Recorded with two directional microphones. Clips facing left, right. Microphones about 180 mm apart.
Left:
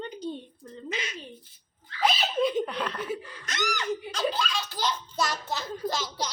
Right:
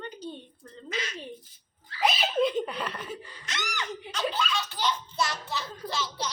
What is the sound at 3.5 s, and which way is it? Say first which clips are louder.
A child's voice: left 6 dB; 40° left (ahead or behind).